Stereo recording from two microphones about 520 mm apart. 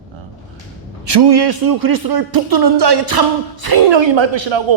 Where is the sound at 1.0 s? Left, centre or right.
Right.